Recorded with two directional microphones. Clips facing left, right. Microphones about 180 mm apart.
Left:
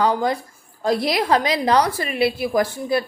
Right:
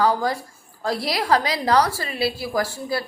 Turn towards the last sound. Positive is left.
turn(degrees=20)  # may be behind; listen again after turning